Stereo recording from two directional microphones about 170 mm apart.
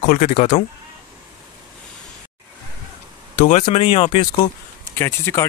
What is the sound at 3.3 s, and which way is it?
Speech, 40° left (ahead or behind).